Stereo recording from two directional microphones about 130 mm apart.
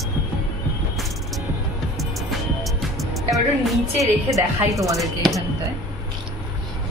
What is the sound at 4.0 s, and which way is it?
Speech, 25° right (ahead or behind).